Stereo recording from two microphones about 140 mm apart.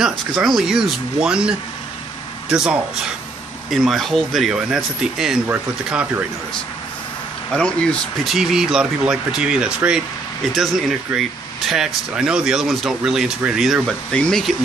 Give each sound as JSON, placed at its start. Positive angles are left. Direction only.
{"t": 0.0, "sound": "speech", "side_deg": 0}
{"t": 2.5, "sound": "speech", "side_deg": -5}
{"t": 7.5, "sound": "speech", "side_deg": 5}
{"t": 8.4, "sound": "speech", "side_deg": -5}
{"t": 11.1, "sound": "speech", "side_deg": -5}